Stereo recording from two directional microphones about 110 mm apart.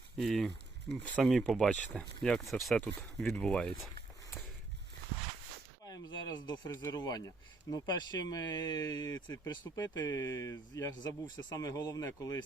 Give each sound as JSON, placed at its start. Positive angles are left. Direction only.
{"t": 0.2, "sound": "speech", "side_deg": 5}
{"t": 5.8, "sound": "speech", "side_deg": 35}